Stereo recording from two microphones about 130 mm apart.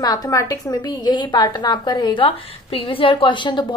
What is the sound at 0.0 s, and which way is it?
A woman's voice, 30° left (ahead or behind).